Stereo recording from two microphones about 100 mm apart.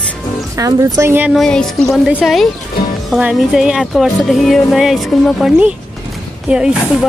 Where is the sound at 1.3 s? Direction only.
5° left (ahead or behind).